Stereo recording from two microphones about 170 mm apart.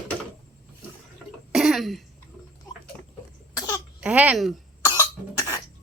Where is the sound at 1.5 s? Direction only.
Centre (ahead or behind).